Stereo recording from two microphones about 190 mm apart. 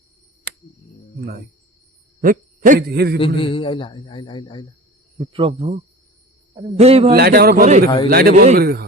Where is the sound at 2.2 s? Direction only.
45° right (ahead or behind).